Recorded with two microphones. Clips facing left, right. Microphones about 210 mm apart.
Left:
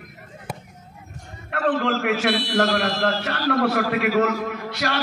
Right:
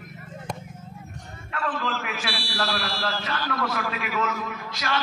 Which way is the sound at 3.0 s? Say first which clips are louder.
Left 6 dB; 60° left (ahead or behind).